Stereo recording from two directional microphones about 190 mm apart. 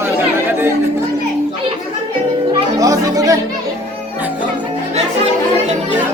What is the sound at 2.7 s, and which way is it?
Chatter, 20° right (ahead or behind).